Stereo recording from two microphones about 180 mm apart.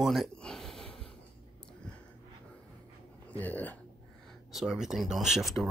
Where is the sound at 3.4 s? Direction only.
10° left (ahead or behind).